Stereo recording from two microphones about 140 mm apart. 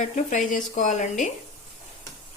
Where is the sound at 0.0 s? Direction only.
65° left (ahead or behind).